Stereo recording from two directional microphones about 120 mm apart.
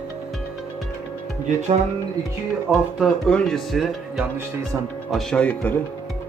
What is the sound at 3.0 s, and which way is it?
Speech, 5° left (ahead or behind).